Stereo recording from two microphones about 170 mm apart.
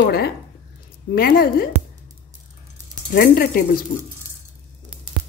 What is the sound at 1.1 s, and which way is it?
Speech, 60° left (ahead or behind).